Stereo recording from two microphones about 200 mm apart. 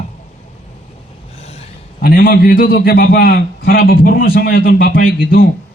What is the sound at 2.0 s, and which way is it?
A man's voice, 50° left (ahead or behind).